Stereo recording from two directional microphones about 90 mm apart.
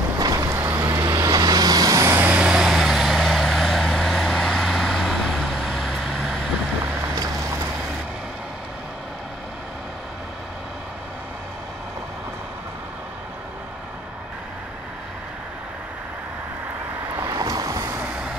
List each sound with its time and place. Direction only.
0.2 s vehicle: 40° right (ahead or behind)
2.1 s vehicle: 15° right (ahead or behind)
17.3 s vehicle: 40° right (ahead or behind)